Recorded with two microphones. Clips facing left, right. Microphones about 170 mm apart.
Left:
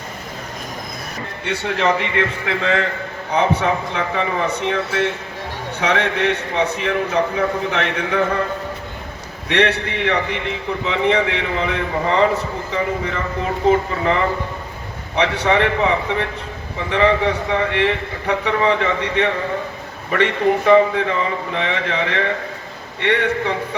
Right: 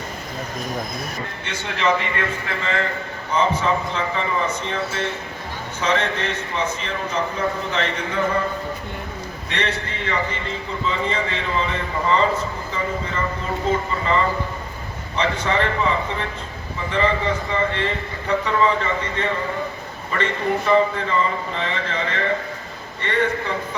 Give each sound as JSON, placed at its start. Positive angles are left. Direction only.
{"t": 1.5, "sound": "a man's voice", "side_deg": 65}
{"t": 9.5, "sound": "a man's voice", "side_deg": 65}